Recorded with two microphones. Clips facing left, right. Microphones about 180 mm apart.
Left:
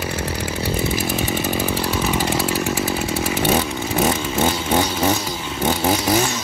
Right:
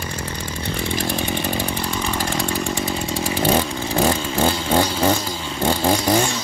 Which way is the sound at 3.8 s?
30° right (ahead or behind).